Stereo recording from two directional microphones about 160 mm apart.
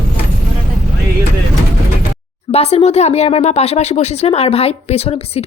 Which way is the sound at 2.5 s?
40° left (ahead or behind).